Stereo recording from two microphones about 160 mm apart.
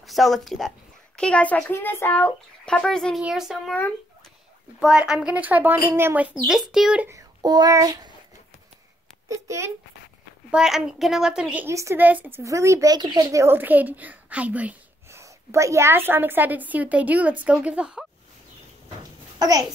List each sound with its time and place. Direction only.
0.0 s speech: centre (ahead or behind)
4.7 s a woman's voice: 5° right (ahead or behind)
7.1 s a child's voice: 25° right (ahead or behind)
9.3 s a child's voice: 20° right (ahead or behind)
10.5 s a woman's voice: 5° right (ahead or behind)
19.3 s a sound: 25° right (ahead or behind)